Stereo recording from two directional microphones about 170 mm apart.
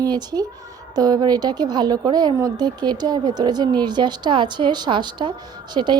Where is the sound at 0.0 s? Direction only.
25° right (ahead or behind).